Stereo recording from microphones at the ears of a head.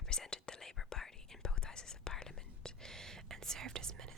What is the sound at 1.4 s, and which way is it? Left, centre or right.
Whispering, left.